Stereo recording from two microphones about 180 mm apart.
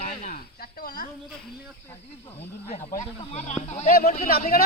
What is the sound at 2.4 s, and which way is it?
Speech, 40° left (ahead or behind).